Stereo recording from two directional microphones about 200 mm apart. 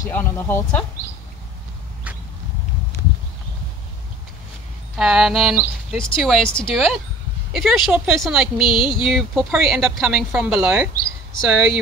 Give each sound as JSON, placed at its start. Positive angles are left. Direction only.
{"t": 0.1, "sound": "speech", "side_deg": 10}
{"t": 4.9, "sound": "speech", "side_deg": -5}
{"t": 8.6, "sound": "a sound", "side_deg": 25}
{"t": 9.0, "sound": "speech", "side_deg": -5}